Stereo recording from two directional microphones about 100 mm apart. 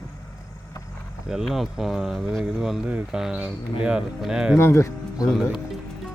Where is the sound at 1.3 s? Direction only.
5° right (ahead or behind).